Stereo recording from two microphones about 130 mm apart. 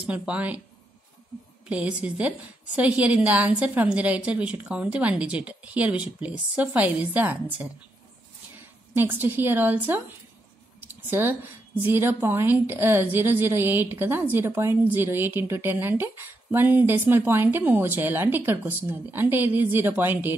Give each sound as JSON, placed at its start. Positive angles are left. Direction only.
{"t": 0.0, "sound": "a woman's voice", "side_deg": -10}
{"t": 1.7, "sound": "a woman's voice", "side_deg": -10}
{"t": 8.9, "sound": "a woman's voice", "side_deg": -15}